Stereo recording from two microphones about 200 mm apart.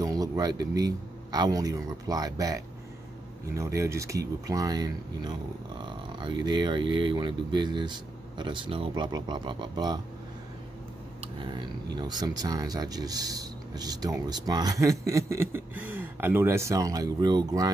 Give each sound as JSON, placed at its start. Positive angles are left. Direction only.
{"t": 0.0, "sound": "a man's voice", "side_deg": -20}
{"t": 11.4, "sound": "speech", "side_deg": -20}